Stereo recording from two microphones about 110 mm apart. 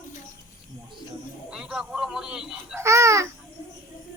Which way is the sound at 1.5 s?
5° right (ahead or behind).